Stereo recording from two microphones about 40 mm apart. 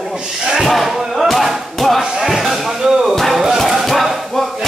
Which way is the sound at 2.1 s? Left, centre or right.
Centre.